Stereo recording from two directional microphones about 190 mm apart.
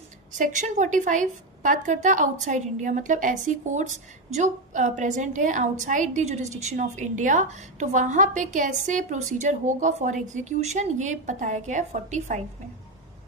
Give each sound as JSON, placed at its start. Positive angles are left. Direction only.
{"t": 0.3, "sound": "a woman's voice", "side_deg": -40}